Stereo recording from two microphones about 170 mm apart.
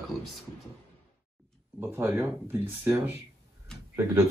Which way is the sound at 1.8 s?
10° right (ahead or behind).